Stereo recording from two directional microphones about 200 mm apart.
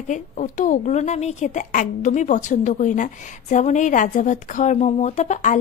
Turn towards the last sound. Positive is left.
turn(degrees=35)  # may be behind; listen again after turning